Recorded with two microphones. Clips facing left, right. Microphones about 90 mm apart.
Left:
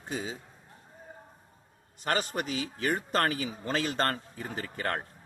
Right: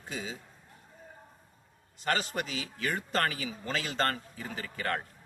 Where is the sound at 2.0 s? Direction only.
40° left (ahead or behind).